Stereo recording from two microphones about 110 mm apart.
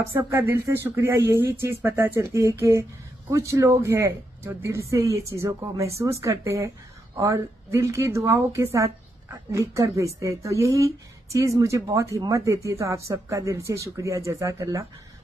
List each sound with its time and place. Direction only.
0.2 s speech: 25° right (ahead or behind)